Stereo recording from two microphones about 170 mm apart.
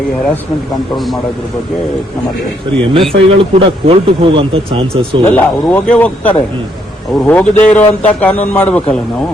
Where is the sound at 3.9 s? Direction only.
35° right (ahead or behind).